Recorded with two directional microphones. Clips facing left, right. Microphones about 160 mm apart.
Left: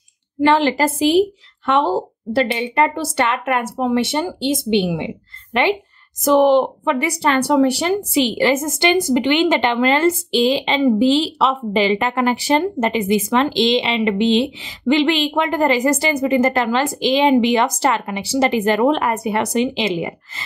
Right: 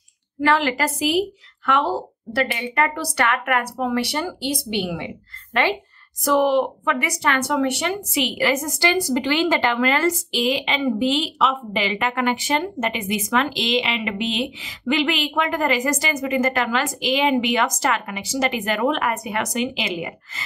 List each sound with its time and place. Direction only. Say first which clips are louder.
0.4 s speech: left 5 dB; 30° left (ahead or behind)